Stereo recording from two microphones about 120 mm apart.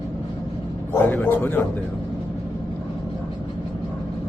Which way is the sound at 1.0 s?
15° left (ahead or behind).